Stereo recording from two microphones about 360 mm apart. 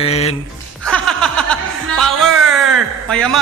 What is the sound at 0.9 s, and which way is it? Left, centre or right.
Chuckle, centre.